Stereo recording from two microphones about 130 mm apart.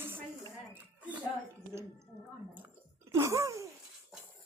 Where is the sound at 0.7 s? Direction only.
10° right (ahead or behind).